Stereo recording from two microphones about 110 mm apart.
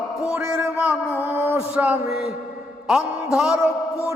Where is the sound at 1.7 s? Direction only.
15° right (ahead or behind).